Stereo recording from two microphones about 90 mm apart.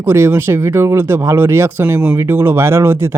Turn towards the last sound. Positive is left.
turn(degrees=-25)  # may be behind; listen again after turning